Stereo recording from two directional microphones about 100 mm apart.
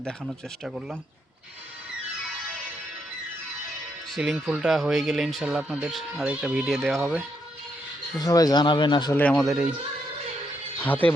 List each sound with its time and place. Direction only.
0.6 s speech: 5° right (ahead or behind)
4.1 s speech: centre (ahead or behind)
6.7 s speech: centre (ahead or behind)
8.2 s speech: 40° left (ahead or behind)
9.1 s speech: 15° left (ahead or behind)
10.8 s speech: 15° left (ahead or behind)